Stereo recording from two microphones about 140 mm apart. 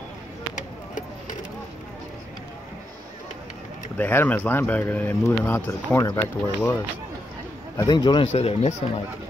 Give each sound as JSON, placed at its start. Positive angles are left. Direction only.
{"t": 3.9, "sound": "speech", "side_deg": 15}
{"t": 7.7, "sound": "a man's voice", "side_deg": 30}
{"t": 8.3, "sound": "speech", "side_deg": 50}